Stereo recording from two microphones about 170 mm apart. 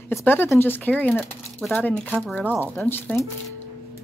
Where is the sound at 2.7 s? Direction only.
15° left (ahead or behind).